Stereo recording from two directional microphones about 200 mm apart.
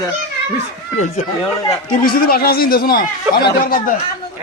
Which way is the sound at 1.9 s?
45° left (ahead or behind).